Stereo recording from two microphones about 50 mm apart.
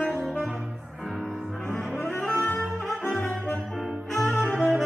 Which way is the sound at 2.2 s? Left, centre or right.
Left.